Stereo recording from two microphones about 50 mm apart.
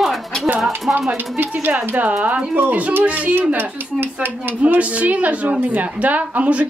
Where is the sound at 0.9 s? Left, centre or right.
Right.